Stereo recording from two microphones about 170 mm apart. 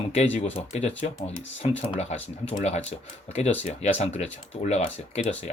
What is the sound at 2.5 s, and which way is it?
Speech, 40° left (ahead or behind).